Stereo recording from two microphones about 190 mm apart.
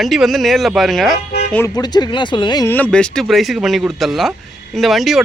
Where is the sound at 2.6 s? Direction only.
10° left (ahead or behind).